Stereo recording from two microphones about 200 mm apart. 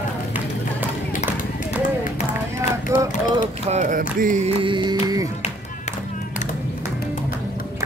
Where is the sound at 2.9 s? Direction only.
15° right (ahead or behind).